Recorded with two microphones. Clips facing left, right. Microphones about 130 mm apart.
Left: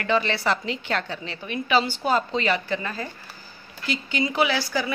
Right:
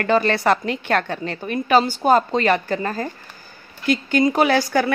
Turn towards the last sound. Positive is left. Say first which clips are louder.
# right 7 dB
turn(degrees=-55)  # may be behind; listen again after turning